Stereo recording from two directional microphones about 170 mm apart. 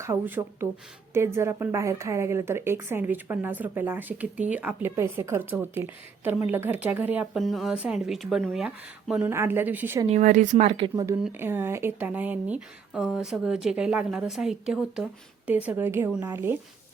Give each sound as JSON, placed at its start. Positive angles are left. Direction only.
{"t": 0.0, "sound": "a woman's voice", "side_deg": -15}
{"t": 10.1, "sound": "speech", "side_deg": -45}
{"t": 11.2, "sound": "a woman's voice", "side_deg": -15}